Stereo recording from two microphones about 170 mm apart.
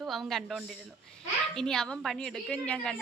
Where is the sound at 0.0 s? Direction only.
Centre (ahead or behind).